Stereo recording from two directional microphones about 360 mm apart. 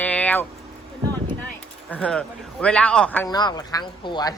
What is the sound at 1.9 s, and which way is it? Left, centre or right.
A man's voice, centre.